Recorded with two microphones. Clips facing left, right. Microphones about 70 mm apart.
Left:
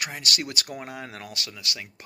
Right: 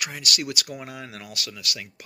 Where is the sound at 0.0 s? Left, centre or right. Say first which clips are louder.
Right 1 dB; left.